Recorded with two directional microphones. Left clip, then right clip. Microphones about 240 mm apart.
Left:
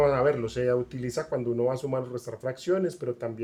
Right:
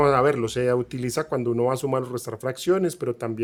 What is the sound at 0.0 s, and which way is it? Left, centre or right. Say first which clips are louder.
Speech: right 4 dB; right.